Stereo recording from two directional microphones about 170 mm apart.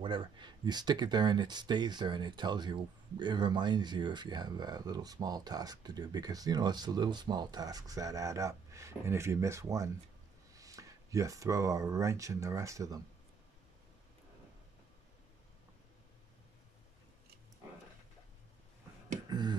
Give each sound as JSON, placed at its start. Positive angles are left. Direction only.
{"t": 0.0, "sound": "speech", "side_deg": -30}
{"t": 19.2, "sound": "beatboxing", "side_deg": -25}